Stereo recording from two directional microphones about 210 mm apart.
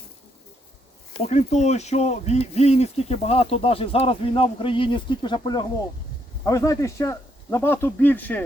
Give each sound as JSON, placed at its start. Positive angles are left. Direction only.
{"t": 1.3, "sound": "speech", "side_deg": 35}